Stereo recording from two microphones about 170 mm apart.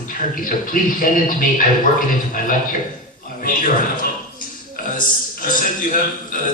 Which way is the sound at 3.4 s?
55° left (ahead or behind).